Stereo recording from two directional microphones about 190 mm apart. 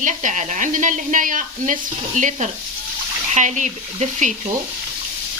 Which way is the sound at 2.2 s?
40° right (ahead or behind).